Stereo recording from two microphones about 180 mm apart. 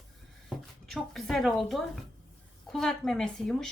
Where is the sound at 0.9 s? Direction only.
Centre (ahead or behind).